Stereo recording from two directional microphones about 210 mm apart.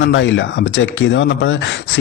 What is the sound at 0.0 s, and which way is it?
Speech, 65° left (ahead or behind).